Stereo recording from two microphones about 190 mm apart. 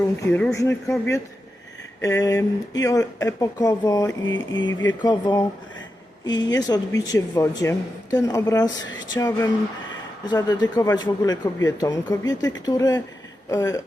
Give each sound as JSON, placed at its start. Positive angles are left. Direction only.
{"t": 0.3, "sound": "a woman's voice", "side_deg": 10}
{"t": 4.3, "sound": "a sound", "side_deg": 80}
{"t": 5.0, "sound": "a woman's voice", "side_deg": 20}